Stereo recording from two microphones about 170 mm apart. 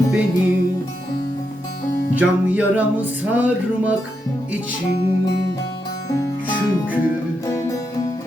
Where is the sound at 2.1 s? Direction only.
10° right (ahead or behind).